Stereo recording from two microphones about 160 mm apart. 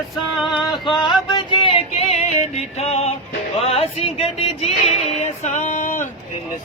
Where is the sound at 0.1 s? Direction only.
Centre (ahead or behind).